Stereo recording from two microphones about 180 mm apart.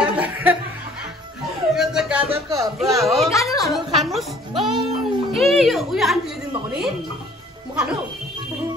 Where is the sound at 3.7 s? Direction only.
Centre (ahead or behind).